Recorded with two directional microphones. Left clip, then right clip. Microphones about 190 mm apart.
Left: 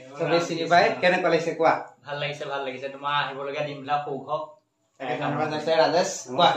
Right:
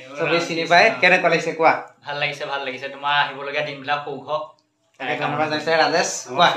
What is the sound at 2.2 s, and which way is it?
A man's voice, centre (ahead or behind).